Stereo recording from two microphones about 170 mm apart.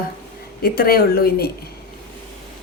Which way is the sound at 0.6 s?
60° left (ahead or behind).